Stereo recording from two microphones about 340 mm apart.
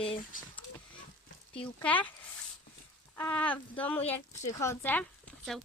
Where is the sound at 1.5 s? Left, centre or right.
Centre.